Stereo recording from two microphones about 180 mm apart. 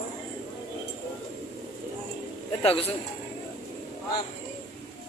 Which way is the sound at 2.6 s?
35° left (ahead or behind).